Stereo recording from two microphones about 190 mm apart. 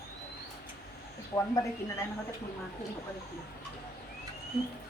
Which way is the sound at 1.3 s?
15° left (ahead or behind).